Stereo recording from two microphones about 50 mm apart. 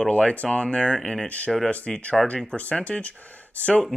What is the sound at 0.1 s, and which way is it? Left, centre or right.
Speech, left.